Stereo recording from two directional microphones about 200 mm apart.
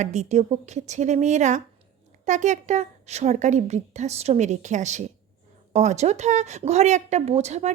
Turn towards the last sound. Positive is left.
turn(degrees=-35)  # may be behind; listen again after turning